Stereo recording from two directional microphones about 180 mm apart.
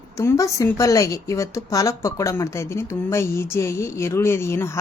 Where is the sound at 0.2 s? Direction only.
15° left (ahead or behind).